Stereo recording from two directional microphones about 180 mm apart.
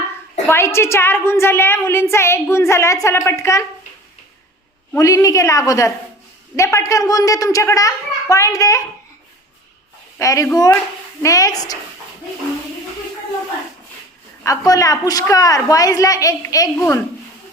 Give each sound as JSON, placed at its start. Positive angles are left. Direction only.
{"t": 0.4, "sound": "a woman's voice", "side_deg": 15}
{"t": 4.9, "sound": "a woman's voice", "side_deg": 15}
{"t": 10.2, "sound": "a woman's voice", "side_deg": 15}
{"t": 14.4, "sound": "a child's voice", "side_deg": 20}